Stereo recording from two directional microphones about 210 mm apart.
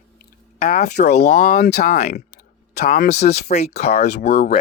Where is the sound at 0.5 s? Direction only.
35° left (ahead or behind).